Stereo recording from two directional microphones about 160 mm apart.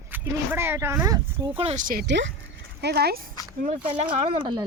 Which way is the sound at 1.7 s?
60° right (ahead or behind).